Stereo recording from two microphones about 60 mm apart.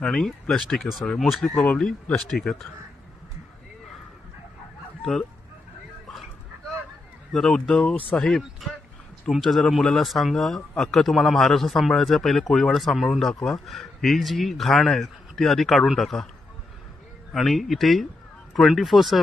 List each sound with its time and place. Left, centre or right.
0.0 s speech: centre
1.0 s speech: centre
1.5 s speech: left
2.2 s speech: centre
7.3 s speech: centre
7.7 s speech: centre
8.2 s speech: centre
17.3 s speech: centre